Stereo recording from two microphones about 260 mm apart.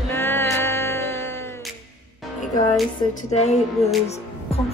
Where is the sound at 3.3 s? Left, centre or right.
Left.